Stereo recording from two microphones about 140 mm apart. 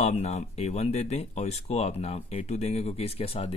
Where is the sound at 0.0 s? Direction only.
50° left (ahead or behind).